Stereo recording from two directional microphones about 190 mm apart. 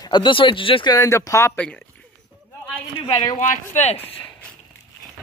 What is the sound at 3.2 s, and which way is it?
Speech, 40° left (ahead or behind).